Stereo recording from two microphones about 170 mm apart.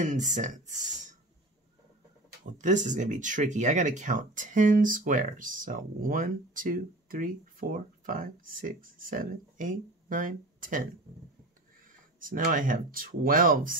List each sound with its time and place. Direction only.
0.0 s speech: 45° right (ahead or behind)
2.4 s speech: 45° right (ahead or behind)
12.2 s speech: 55° right (ahead or behind)